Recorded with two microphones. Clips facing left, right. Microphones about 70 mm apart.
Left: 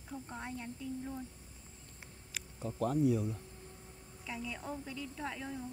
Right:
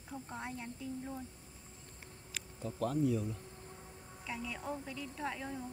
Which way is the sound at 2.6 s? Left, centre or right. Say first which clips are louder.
Left 2 dB; centre.